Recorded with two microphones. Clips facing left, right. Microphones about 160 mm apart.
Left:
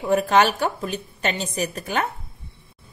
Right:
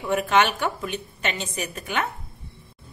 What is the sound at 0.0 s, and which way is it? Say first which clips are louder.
A woman's voice: left 3 dB; 35° left (ahead or behind).